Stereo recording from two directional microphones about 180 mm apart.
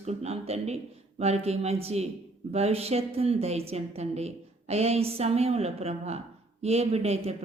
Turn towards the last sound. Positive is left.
turn(degrees=-35)  # may be behind; listen again after turning